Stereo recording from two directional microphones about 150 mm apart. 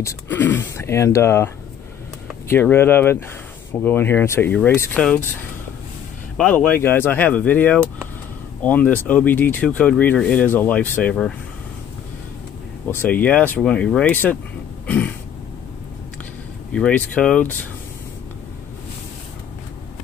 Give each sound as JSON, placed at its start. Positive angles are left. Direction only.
{"t": 0.0, "sound": "speech", "side_deg": 10}
{"t": 2.5, "sound": "speech", "side_deg": 15}
{"t": 6.3, "sound": "speech", "side_deg": 10}
{"t": 12.9, "sound": "speech", "side_deg": 10}
{"t": 16.7, "sound": "speech", "side_deg": 5}